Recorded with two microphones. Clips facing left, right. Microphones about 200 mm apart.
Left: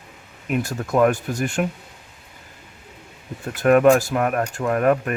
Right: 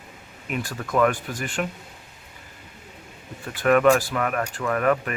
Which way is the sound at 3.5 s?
45° left (ahead or behind).